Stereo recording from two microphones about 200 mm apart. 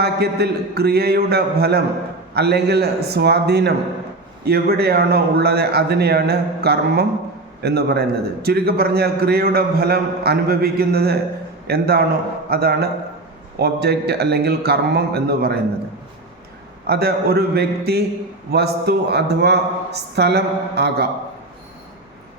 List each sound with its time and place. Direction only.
0.0 s a man's voice: 55° right (ahead or behind)
16.8 s a man's voice: 50° right (ahead or behind)